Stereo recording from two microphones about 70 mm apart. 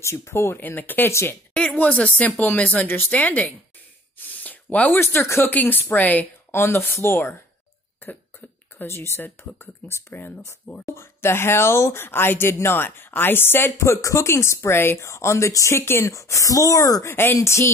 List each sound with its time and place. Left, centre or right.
0.0 s speech: left
0.6 s speech: left
4.3 s a sound: left
5.0 s speech: left
5.5 s speech: left
6.5 s speech: left
8.7 s speech: left
13.7 s speech: left
16.1 s speech: left
17.1 s speech: left